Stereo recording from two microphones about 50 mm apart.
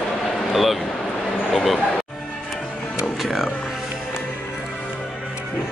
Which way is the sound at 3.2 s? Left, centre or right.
Centre.